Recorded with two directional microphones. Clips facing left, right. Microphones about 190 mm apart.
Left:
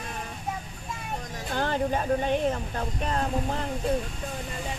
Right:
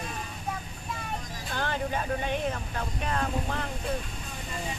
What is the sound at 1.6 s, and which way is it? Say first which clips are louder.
Speech: left 4 dB; 40° left (ahead or behind).